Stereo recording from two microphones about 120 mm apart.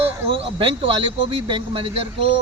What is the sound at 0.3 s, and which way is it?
Speech, 50° right (ahead or behind).